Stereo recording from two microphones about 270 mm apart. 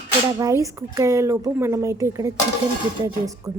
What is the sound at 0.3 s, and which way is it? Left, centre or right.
A woman's voice, centre.